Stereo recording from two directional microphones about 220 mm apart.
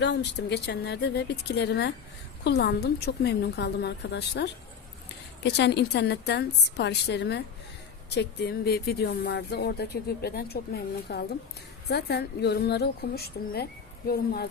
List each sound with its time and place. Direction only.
0.0 s speech: 50° left (ahead or behind)